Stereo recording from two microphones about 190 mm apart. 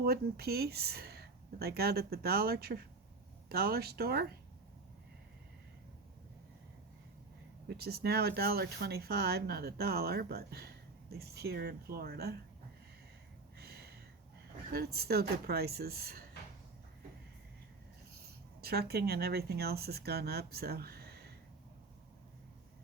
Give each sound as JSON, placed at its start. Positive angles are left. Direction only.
{"t": 0.0, "sound": "speech", "side_deg": -55}
{"t": 7.7, "sound": "speech", "side_deg": -55}
{"t": 13.6, "sound": "a sound", "side_deg": -55}
{"t": 14.7, "sound": "speech", "side_deg": -55}
{"t": 18.6, "sound": "speech", "side_deg": -55}